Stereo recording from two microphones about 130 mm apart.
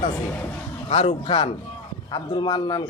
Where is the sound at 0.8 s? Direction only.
55° left (ahead or behind).